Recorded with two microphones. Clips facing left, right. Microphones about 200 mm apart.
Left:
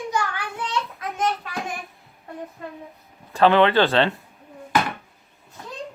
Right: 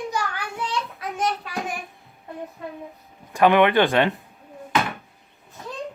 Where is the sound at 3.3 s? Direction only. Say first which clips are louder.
Even; 15° right (ahead or behind).